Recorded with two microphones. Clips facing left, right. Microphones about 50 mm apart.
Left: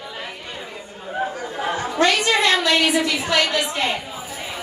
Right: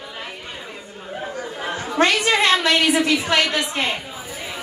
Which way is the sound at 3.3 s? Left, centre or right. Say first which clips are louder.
Even; right.